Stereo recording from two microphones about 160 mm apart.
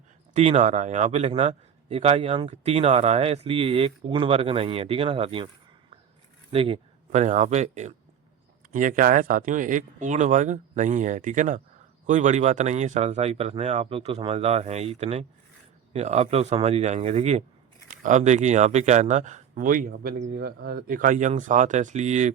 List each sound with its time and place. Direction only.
0.3 s a man's voice: 40° right (ahead or behind)
6.5 s speech: 35° right (ahead or behind)
8.7 s a man's voice: 55° right (ahead or behind)